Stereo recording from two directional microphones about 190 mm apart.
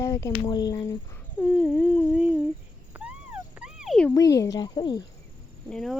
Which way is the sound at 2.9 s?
10° right (ahead or behind).